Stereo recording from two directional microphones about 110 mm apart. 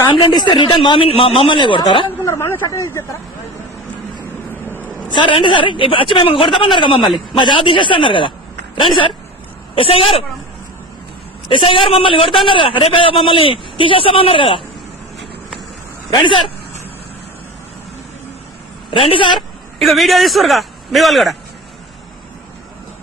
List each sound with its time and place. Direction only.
0.1 s a man's voice: 45° left (ahead or behind)
2.2 s speech: 25° left (ahead or behind)
4.6 s vehicle: 15° left (ahead or behind)
5.1 s a man's voice: 50° left (ahead or behind)
9.7 s a man's voice: 60° left (ahead or behind)
11.4 s a man's voice: 50° left (ahead or behind)
16.0 s speech: 45° left (ahead or behind)
18.9 s a man's voice: 55° left (ahead or behind)
19.8 s a man's voice: centre (ahead or behind)